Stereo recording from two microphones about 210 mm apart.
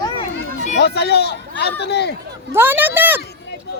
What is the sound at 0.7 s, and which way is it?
Speech, 50° left (ahead or behind).